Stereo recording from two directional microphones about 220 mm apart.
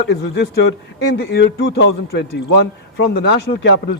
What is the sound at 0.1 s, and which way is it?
Speech, 50° left (ahead or behind).